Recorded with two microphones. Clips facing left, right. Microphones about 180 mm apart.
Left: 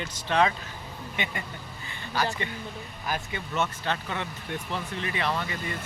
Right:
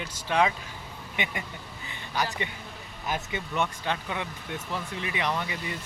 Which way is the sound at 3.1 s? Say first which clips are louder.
Right 1 dB; 15° right (ahead or behind).